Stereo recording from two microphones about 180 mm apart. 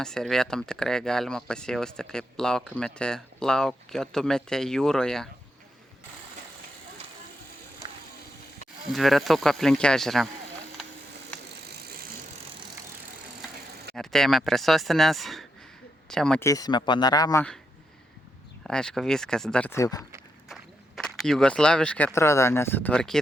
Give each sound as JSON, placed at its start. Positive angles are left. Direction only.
{"t": 0.0, "sound": "speech", "side_deg": 5}
{"t": 8.9, "sound": "speech", "side_deg": 0}
{"t": 13.9, "sound": "speech", "side_deg": 0}
{"t": 16.4, "sound": "speech", "side_deg": 20}
{"t": 18.7, "sound": "speech", "side_deg": 5}
{"t": 20.5, "sound": "speech", "side_deg": 0}